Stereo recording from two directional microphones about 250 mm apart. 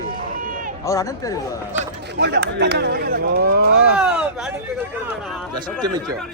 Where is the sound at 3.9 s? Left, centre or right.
Centre.